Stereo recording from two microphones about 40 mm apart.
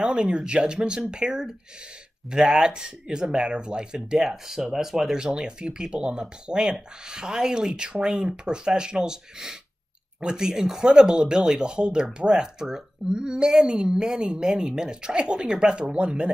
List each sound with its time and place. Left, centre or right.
0.0 s speech: right